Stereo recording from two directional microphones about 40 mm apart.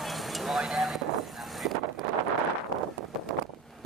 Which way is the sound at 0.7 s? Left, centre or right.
Centre.